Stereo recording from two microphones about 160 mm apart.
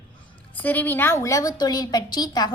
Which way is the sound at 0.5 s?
10° left (ahead or behind).